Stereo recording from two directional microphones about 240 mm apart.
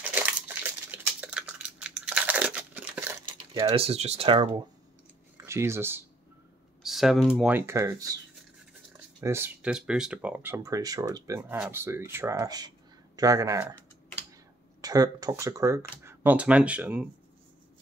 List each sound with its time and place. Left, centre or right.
0.1 s a sound: centre
3.3 s speech: right
9.2 s speech: centre
14.8 s speech: centre